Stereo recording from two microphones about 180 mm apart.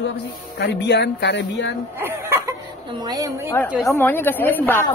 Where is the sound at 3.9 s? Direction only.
10° left (ahead or behind).